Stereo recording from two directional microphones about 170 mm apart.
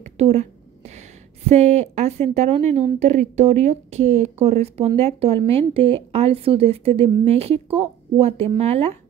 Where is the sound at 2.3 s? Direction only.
40° right (ahead or behind).